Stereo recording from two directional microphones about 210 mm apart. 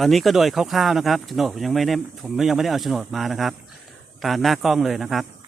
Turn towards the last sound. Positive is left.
turn(degrees=0)  # may be behind; listen again after turning